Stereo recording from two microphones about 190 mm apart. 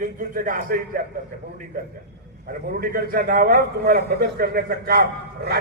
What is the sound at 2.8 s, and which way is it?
A man's voice, 50° right (ahead or behind).